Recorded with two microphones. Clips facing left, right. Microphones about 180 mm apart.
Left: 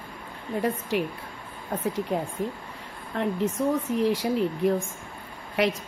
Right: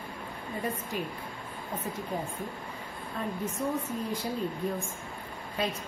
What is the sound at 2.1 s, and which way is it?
A woman's voice, 75° left (ahead or behind).